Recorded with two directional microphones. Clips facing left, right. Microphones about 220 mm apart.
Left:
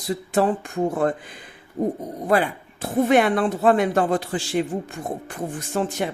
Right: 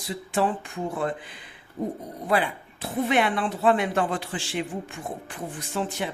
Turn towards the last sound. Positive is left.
turn(degrees=45)  # may be behind; listen again after turning